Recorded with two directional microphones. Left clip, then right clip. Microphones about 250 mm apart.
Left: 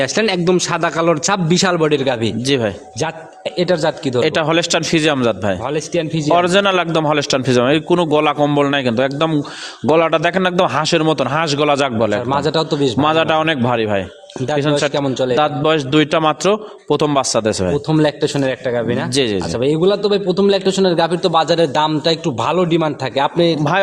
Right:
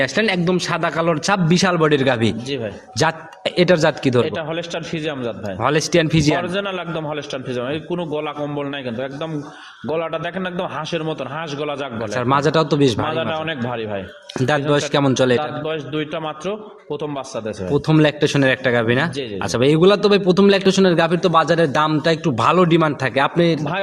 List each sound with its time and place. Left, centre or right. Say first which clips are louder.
0.0 s a man's voice: left 2 dB; centre
1.9 s a man's voice: even; centre
3.6 s a man's voice: right 1 dB; centre
4.4 s a man's voice: left 10 dB; left
5.6 s a man's voice: right 3 dB; centre
6.4 s a man's voice: left 10 dB; left
12.1 s a man's voice: even; centre
13.0 s a man's voice: left 8 dB; left
14.4 s a man's voice: left 2 dB; centre
15.4 s a man's voice: left 9 dB; left
17.8 s a man's voice: right 2 dB; centre